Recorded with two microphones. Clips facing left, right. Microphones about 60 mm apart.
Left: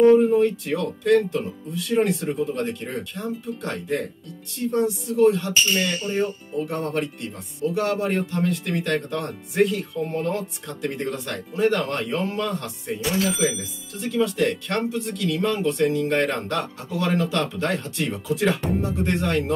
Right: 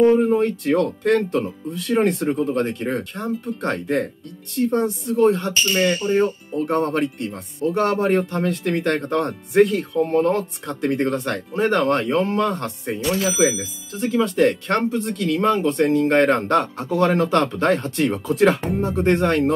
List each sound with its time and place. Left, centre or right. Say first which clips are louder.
0.3 s speech: right 2 dB; right
13.0 s speech: right 2 dB; centre
13.4 s speech: right 5 dB; right
14.3 s speech: right 5 dB; right